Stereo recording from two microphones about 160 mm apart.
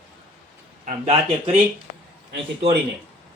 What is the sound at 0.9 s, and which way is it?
Speech, 45° right (ahead or behind).